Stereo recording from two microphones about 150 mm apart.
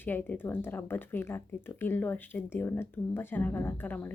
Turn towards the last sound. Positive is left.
turn(degrees=10)  # may be behind; listen again after turning